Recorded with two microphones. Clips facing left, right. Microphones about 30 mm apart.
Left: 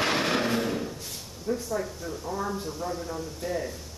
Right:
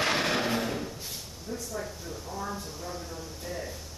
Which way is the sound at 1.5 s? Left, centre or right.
Centre.